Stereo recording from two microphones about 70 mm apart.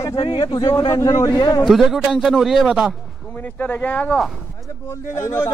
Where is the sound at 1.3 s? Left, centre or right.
Left.